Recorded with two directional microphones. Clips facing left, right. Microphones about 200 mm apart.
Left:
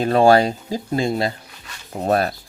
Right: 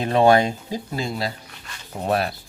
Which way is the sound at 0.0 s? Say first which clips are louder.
Left 2 dB; 35° left (ahead or behind).